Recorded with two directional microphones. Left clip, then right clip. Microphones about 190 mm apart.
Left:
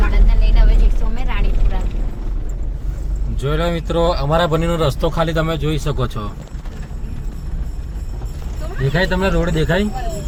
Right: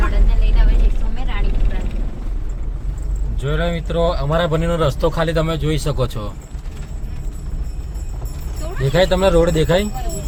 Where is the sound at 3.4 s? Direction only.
20° left (ahead or behind); by 6.2 s 15° right (ahead or behind).